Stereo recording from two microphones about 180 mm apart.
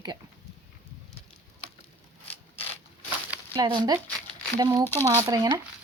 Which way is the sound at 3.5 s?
25° right (ahead or behind).